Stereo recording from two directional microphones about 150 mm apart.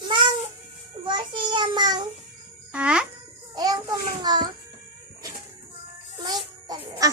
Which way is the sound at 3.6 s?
25° right (ahead or behind).